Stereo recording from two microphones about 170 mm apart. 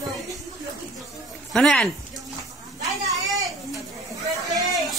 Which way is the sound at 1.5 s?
Centre (ahead or behind).